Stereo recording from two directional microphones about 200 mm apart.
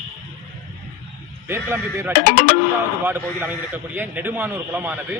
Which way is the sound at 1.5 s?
10° right (ahead or behind).